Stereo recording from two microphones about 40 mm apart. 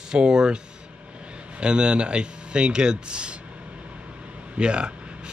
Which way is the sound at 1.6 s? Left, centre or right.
Right.